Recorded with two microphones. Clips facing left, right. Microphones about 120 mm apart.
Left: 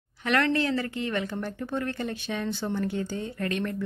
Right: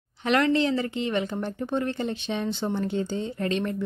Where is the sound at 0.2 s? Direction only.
20° right (ahead or behind).